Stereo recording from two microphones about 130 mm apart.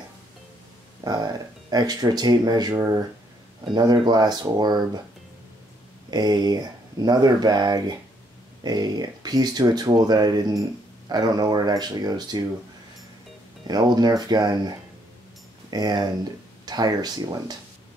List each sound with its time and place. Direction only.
1.0 s speech: 30° right (ahead or behind)
6.0 s speech: 30° right (ahead or behind)
13.7 s speech: 30° right (ahead or behind)
15.7 s speech: 30° right (ahead or behind)